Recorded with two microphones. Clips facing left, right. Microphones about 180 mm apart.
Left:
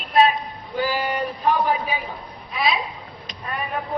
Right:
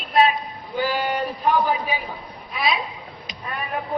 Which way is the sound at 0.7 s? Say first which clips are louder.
Even; centre (ahead or behind).